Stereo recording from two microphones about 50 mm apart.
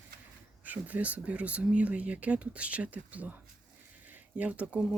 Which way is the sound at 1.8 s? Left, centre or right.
Right.